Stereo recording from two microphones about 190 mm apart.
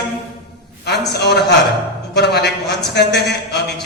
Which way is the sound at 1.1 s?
60° left (ahead or behind).